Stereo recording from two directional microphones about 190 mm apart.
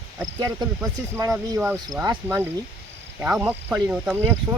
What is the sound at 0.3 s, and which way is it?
Speech, 15° right (ahead or behind).